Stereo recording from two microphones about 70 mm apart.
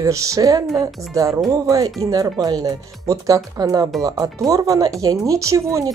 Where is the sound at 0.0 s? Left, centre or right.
Right.